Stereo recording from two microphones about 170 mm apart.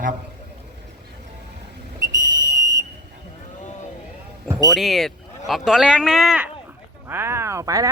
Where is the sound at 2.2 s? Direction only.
20° right (ahead or behind).